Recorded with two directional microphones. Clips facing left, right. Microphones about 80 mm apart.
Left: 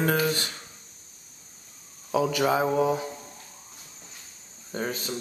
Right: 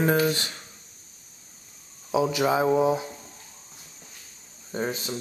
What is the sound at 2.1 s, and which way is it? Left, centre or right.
Speech, centre.